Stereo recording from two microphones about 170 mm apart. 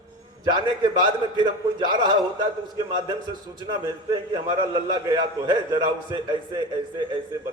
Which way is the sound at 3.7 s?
25° right (ahead or behind).